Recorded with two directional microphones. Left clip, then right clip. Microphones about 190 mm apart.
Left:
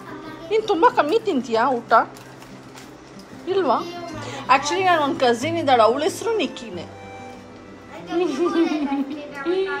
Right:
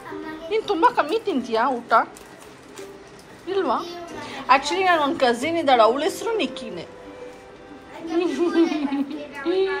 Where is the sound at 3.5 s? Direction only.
20° left (ahead or behind).